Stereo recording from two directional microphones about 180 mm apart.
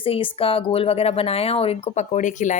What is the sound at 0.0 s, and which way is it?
A woman's voice, 30° left (ahead or behind).